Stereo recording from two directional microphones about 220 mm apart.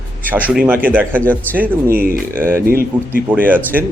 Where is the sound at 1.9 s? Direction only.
40° right (ahead or behind).